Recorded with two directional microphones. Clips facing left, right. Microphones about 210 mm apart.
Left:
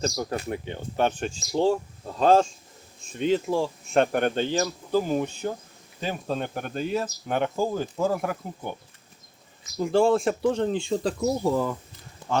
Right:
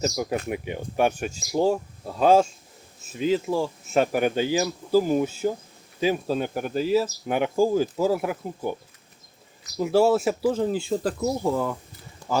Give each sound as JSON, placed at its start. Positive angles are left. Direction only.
{"t": 0.0, "sound": "speech", "side_deg": -10}
{"t": 9.7, "sound": "speech", "side_deg": -5}
{"t": 12.2, "sound": "a sound", "side_deg": 20}